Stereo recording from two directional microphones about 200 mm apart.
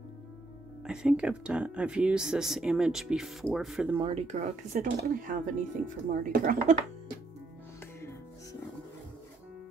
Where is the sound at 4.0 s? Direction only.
35° right (ahead or behind).